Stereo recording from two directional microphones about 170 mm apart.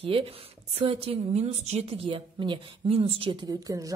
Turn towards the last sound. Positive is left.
turn(degrees=-20)  # may be behind; listen again after turning